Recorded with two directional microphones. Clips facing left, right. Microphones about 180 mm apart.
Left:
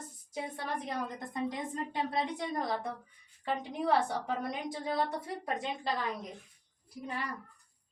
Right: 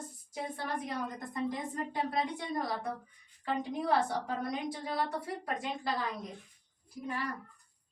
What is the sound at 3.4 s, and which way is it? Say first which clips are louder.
A woman's voice: even; 20° left (ahead or behind).